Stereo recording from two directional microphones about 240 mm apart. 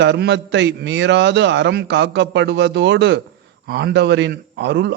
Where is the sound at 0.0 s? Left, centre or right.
Right.